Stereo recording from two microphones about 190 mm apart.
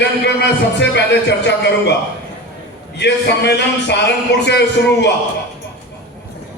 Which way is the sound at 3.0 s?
65° left (ahead or behind).